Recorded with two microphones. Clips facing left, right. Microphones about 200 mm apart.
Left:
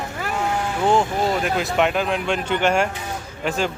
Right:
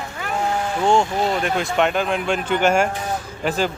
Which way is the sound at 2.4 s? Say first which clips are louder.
Right 2 dB; 45° right (ahead or behind).